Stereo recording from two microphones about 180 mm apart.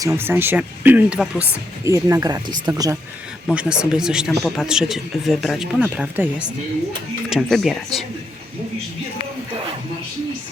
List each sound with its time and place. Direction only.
0.0 s speech: 15° right (ahead or behind)
3.4 s speech: 5° right (ahead or behind)